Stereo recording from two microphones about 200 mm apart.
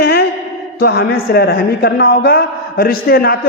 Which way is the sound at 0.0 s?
50° left (ahead or behind).